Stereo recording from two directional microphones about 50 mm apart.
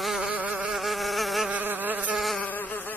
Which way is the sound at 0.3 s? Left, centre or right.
Right.